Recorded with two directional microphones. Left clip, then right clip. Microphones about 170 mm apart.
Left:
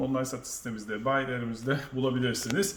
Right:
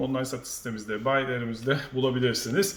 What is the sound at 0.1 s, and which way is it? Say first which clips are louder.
Speech: right 1 dB; 20° right (ahead or behind).